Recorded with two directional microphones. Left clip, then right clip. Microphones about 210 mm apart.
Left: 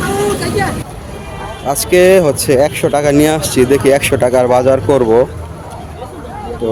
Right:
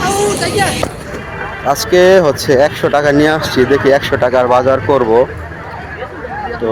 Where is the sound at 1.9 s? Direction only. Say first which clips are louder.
Even; 35° left (ahead or behind).